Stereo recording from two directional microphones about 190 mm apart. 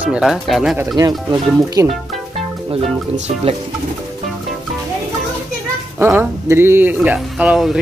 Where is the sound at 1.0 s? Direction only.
20° right (ahead or behind).